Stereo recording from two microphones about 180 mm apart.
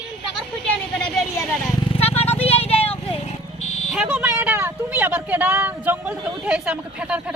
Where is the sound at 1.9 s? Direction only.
35° left (ahead or behind).